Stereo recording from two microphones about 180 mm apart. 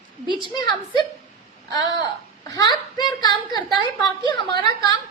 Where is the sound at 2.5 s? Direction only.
20° left (ahead or behind).